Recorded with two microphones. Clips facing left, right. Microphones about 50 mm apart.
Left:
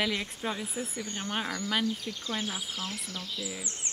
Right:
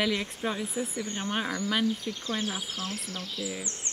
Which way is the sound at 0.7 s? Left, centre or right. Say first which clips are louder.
Right 3 dB; right.